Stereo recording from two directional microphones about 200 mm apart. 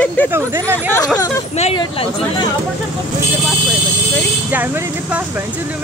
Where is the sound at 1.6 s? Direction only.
30° left (ahead or behind).